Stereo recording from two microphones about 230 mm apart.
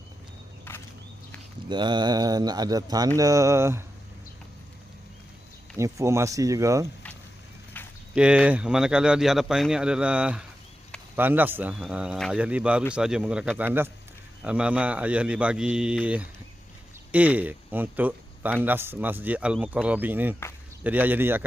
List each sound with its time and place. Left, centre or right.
0.7 s a sound: centre
1.7 s speech: centre
5.7 s speech: centre
8.1 s speech: centre